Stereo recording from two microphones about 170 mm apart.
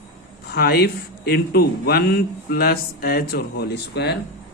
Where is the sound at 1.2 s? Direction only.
65° left (ahead or behind).